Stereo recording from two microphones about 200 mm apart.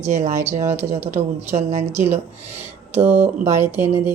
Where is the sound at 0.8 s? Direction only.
30° right (ahead or behind).